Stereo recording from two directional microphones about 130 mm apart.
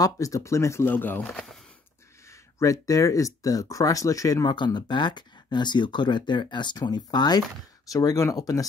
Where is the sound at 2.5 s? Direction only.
25° left (ahead or behind).